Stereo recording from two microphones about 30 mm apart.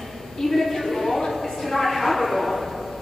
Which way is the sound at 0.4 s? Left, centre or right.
Centre.